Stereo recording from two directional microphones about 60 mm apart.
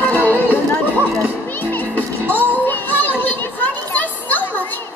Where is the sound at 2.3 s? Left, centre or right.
Left.